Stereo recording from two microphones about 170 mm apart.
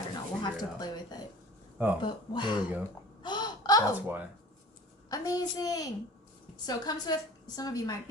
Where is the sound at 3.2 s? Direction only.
25° left (ahead or behind).